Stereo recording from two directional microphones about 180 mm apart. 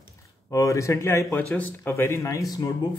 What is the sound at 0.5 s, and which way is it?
Speech, 15° left (ahead or behind).